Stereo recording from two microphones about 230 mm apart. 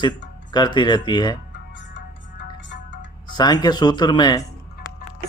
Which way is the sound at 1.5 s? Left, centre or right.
Left.